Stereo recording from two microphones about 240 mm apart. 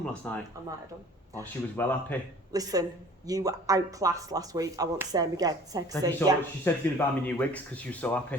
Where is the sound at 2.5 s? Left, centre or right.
Centre.